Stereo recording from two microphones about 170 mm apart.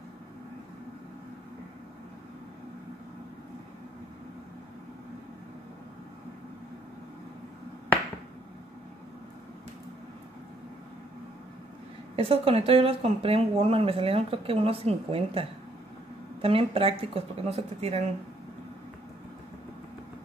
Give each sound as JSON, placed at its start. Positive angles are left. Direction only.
{"t": 12.2, "sound": "speech", "side_deg": -35}